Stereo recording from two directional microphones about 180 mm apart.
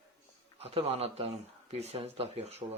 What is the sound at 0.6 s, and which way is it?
Speech, 35° right (ahead or behind).